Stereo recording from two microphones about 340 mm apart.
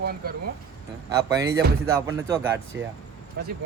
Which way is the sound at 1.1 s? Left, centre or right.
Centre.